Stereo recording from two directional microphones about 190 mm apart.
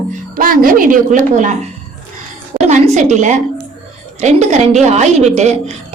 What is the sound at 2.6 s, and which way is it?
A woman's voice, 40° right (ahead or behind).